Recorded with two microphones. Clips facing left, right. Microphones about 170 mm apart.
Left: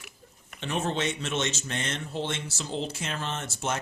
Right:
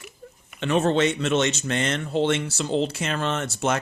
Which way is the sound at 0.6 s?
75° right (ahead or behind).